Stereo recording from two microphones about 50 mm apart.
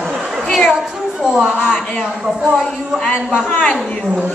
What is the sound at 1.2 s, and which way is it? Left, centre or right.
Speech, centre.